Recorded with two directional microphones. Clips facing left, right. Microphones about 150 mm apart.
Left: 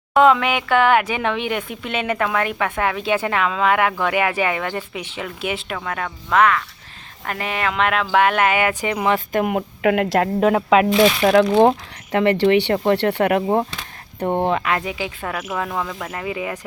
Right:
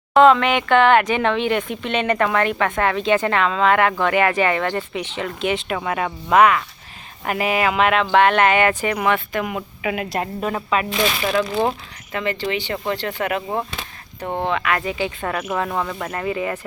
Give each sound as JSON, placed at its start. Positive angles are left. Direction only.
{"t": 0.1, "sound": "speech", "side_deg": 10}
{"t": 5.7, "sound": "speech", "side_deg": -10}
{"t": 9.3, "sound": "speech", "side_deg": 50}
{"t": 10.8, "sound": "speech", "side_deg": 45}
{"t": 11.3, "sound": "speech", "side_deg": 65}
{"t": 14.8, "sound": "speech", "side_deg": 10}